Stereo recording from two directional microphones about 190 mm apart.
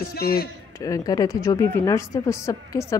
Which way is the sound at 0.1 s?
55° left (ahead or behind).